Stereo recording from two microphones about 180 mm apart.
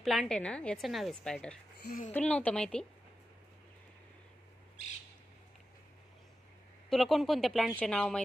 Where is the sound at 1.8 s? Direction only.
50° left (ahead or behind).